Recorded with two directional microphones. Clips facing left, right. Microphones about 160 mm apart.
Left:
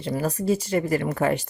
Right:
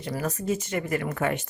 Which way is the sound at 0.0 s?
30° left (ahead or behind).